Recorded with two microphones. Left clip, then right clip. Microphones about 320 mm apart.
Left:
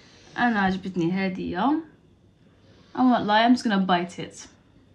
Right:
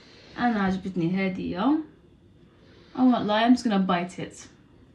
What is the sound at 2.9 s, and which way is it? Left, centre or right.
A woman's voice, centre.